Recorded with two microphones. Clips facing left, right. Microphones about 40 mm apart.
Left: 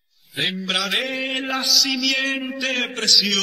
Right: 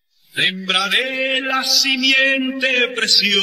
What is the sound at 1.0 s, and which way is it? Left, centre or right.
Mantra, centre.